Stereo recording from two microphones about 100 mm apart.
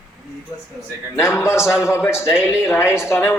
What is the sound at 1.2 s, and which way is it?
Speech, 30° left (ahead or behind).